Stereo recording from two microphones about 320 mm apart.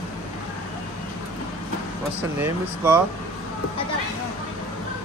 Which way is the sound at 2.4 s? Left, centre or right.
Centre.